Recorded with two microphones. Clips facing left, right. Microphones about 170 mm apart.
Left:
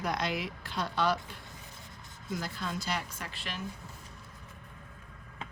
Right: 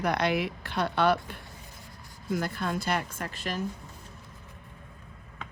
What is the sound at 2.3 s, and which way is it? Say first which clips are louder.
Speech: right 6 dB; 55° right (ahead or behind).